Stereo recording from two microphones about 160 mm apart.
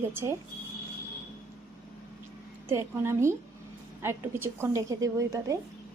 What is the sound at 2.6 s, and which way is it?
A woman's voice, 15° right (ahead or behind).